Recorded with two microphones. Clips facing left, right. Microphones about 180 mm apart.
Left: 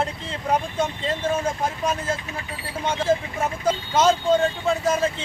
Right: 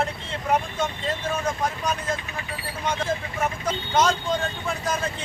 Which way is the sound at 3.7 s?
30° left (ahead or behind).